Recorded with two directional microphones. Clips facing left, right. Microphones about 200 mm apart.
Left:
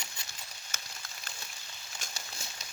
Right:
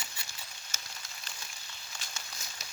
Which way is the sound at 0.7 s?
55° left (ahead or behind).